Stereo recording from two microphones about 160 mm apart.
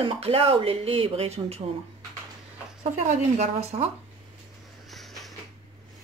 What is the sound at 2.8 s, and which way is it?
Speech, 50° right (ahead or behind).